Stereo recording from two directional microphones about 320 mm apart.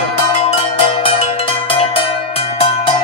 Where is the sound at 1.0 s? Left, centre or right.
Centre.